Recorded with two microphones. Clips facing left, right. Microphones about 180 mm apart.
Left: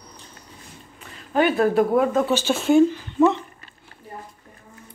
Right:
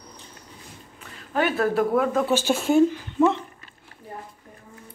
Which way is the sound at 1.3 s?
20° left (ahead or behind).